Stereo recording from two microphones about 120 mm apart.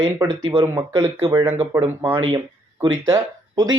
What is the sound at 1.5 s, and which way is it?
Speech, 55° right (ahead or behind).